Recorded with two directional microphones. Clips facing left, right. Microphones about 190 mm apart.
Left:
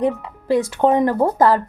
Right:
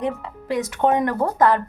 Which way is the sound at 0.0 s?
30° left (ahead or behind).